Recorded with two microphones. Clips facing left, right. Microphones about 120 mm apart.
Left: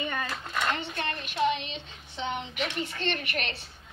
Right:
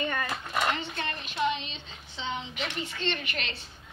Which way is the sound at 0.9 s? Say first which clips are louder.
Left 2 dB; 60° left (ahead or behind).